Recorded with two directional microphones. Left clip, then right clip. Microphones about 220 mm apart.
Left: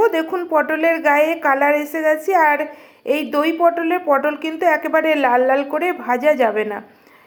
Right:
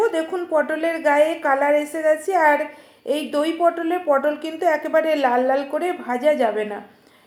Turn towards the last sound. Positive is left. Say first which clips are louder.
# left 3 dB
turn(degrees=30)  # may be behind; listen again after turning